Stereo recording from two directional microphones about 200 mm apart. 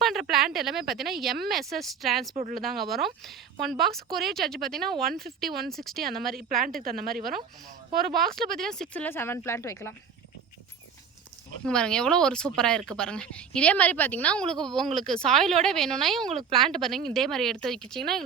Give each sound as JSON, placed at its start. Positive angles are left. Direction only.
{"t": 0.0, "sound": "speech", "side_deg": 0}
{"t": 2.3, "sound": "speech", "side_deg": -35}
{"t": 2.6, "sound": "speech", "side_deg": 0}
{"t": 6.7, "sound": "a woman's voice", "side_deg": -50}
{"t": 8.1, "sound": "speech", "side_deg": 0}
{"t": 11.6, "sound": "speech", "side_deg": 5}